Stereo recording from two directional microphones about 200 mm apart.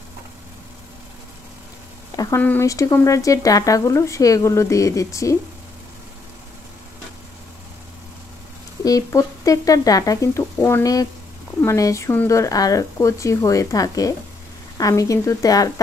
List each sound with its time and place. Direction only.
2.1 s speech: 15° left (ahead or behind)
8.8 s speech: 15° left (ahead or behind)